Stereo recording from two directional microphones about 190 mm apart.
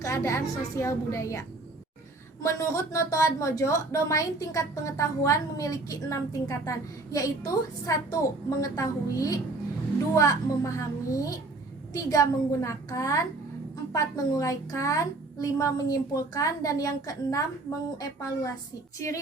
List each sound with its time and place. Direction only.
0.0 s a woman's voice: 15° left (ahead or behind)